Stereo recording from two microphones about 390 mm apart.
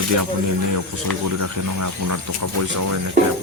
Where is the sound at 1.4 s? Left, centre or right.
Right.